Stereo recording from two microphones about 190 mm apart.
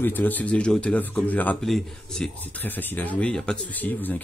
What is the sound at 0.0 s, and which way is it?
A man's voice, 10° left (ahead or behind).